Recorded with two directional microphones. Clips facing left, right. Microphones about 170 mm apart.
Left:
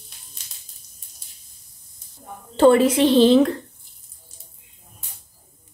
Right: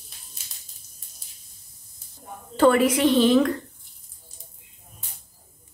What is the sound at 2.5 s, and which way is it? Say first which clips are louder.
Speech: left 4 dB; 25° left (ahead or behind).